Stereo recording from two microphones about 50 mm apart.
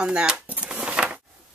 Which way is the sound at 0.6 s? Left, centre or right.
Centre.